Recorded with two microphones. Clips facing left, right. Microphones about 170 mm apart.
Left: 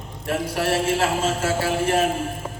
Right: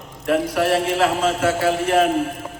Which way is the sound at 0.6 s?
30° left (ahead or behind).